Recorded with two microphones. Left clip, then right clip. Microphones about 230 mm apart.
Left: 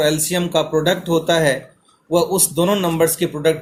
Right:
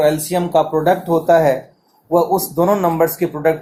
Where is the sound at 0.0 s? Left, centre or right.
Left.